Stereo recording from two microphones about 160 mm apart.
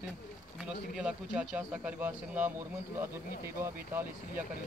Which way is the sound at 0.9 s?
5° right (ahead or behind).